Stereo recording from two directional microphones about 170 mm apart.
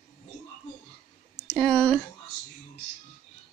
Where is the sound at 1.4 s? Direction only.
5° left (ahead or behind).